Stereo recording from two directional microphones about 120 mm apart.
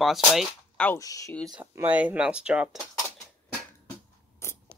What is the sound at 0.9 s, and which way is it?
Speech, 25° left (ahead or behind).